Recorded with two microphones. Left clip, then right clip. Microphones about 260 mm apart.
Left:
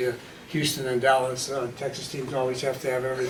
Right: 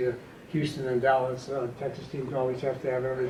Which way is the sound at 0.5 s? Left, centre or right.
Centre.